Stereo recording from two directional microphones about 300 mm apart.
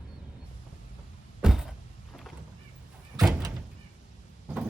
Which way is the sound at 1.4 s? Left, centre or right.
Centre.